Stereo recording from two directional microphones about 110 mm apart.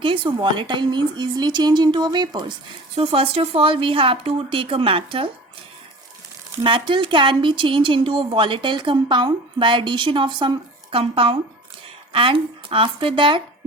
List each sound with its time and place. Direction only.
0.0 s speech: 50° right (ahead or behind)
2.9 s speech: 60° right (ahead or behind)
6.7 s speech: 50° right (ahead or behind)
10.9 s speech: 60° right (ahead or behind)